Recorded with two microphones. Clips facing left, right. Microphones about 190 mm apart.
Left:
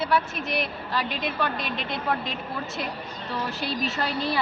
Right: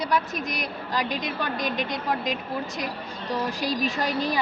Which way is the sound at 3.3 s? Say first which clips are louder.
Right 3 dB; 15° right (ahead or behind).